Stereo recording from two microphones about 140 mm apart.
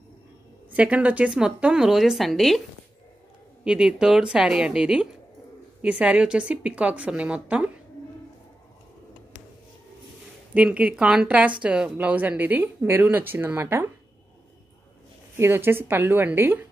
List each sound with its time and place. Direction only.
0.7 s a woman's voice: 10° right (ahead or behind)
3.6 s a woman's voice: 5° right (ahead or behind)
10.5 s speech: 10° right (ahead or behind)
15.3 s speech: 15° right (ahead or behind)